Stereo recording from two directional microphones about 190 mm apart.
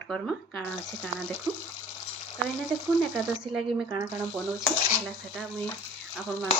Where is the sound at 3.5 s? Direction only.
5° right (ahead or behind).